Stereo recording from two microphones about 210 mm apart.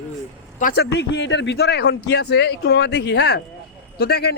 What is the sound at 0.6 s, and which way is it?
Speech, 50° left (ahead or behind).